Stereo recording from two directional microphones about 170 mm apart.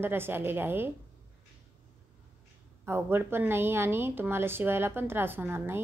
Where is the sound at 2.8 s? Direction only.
15° right (ahead or behind).